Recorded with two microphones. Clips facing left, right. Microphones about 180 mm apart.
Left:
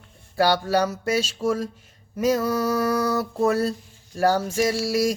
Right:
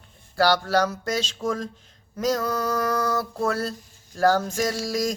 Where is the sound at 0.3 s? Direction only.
15° left (ahead or behind).